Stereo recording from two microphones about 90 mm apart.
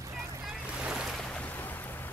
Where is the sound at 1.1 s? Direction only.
15° left (ahead or behind).